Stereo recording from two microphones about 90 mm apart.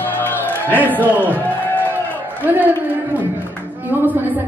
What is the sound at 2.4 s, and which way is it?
A woman's voice, 20° right (ahead or behind).